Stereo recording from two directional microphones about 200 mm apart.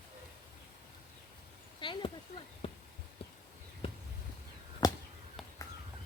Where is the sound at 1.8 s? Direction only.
25° left (ahead or behind).